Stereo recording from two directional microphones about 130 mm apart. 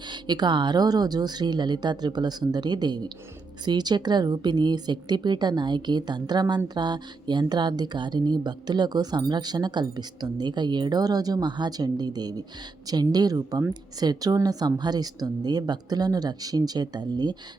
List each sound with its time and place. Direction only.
0.1 s speech: 35° right (ahead or behind)